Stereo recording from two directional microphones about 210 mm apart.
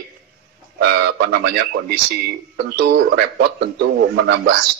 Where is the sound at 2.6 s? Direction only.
50° right (ahead or behind).